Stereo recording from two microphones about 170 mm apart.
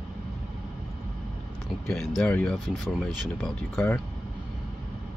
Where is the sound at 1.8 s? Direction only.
5° left (ahead or behind).